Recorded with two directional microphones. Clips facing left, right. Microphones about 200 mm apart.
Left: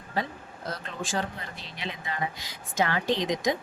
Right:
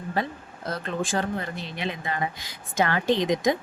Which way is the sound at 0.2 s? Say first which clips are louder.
Right 1 dB; 55° right (ahead or behind).